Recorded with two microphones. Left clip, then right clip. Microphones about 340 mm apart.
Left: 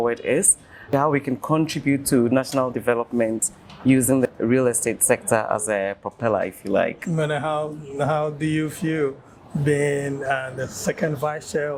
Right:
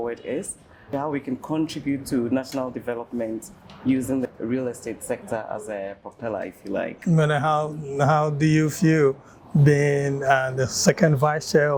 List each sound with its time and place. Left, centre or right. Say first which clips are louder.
0.0 s speech: left 7 dB; left
7.1 s speech: right 2 dB; right
9.6 s mantra: right 1 dB; right
10.8 s speech: right 4 dB; right